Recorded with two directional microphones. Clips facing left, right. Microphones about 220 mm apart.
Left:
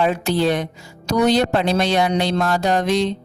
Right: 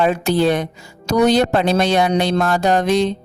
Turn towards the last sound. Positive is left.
turn(degrees=-50)  # may be behind; listen again after turning